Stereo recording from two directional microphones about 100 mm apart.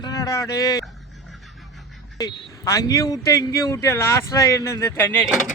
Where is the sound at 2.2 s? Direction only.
40° left (ahead or behind); by 5.2 s 20° left (ahead or behind).